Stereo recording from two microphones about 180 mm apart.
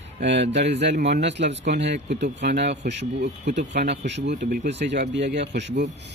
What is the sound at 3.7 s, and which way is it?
Speech, 70° right (ahead or behind).